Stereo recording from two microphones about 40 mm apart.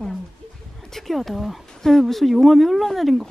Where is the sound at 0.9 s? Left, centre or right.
Centre.